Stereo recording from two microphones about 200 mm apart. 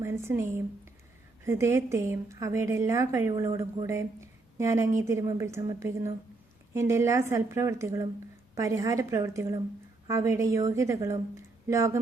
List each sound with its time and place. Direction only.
0.0 s a woman's voice: 15° right (ahead or behind)